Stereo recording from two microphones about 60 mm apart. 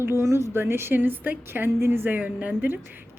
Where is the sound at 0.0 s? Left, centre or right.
Right.